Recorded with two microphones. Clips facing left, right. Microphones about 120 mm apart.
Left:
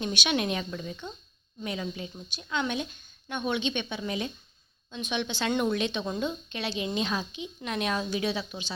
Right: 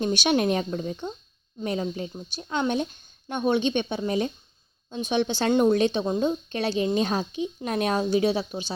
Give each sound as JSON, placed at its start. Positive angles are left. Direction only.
{"t": 0.0, "sound": "a woman's voice", "side_deg": -40}